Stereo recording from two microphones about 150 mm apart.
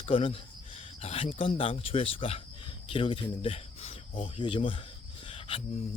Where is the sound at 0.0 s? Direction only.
35° left (ahead or behind).